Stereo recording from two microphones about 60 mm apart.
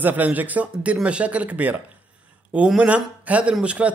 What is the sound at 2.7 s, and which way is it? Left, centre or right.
Speech, right.